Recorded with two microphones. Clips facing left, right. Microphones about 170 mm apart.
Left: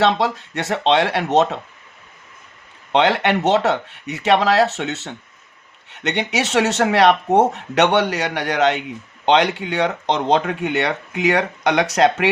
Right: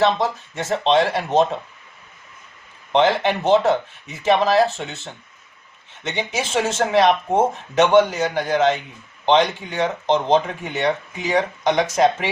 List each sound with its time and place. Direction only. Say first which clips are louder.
0.0 s speech: left 1 dB; 75° left (ahead or behind)
2.9 s speech: left 1 dB; 75° left (ahead or behind)